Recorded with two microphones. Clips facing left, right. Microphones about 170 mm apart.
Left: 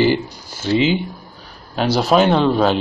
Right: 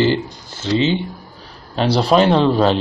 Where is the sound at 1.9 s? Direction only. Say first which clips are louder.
Right 1 dB; centre (ahead or behind).